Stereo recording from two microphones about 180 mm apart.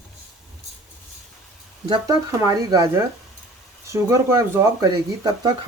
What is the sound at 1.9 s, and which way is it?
Speech, 20° right (ahead or behind).